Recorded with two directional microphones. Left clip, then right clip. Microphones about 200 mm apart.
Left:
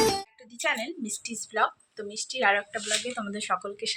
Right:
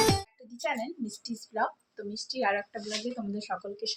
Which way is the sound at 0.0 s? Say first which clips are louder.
Left 1 dB; centre (ahead or behind).